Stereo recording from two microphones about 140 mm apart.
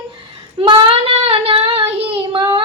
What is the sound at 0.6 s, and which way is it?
Child singing, 40° right (ahead or behind).